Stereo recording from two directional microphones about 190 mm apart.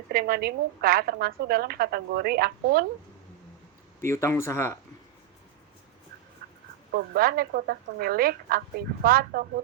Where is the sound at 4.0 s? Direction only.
15° left (ahead or behind).